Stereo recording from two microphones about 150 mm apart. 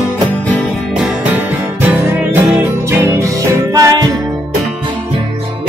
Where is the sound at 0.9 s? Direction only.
5° right (ahead or behind); by 4.1 s 20° right (ahead or behind).